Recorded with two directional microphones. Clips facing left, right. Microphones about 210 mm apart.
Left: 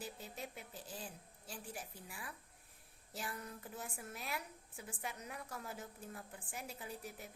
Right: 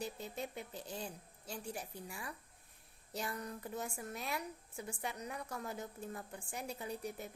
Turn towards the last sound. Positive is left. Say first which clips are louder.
# right 6 dB
turn(degrees=5)  # may be behind; listen again after turning